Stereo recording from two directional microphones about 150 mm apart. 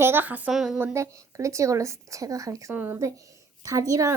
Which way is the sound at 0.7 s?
15° right (ahead or behind).